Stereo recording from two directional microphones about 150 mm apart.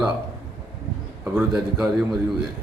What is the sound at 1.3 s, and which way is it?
A man's voice, 5° right (ahead or behind).